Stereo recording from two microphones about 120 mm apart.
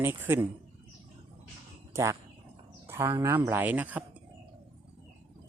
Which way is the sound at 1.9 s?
25° right (ahead or behind).